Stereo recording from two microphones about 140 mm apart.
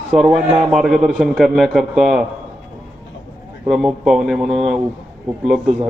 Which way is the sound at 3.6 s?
Centre (ahead or behind).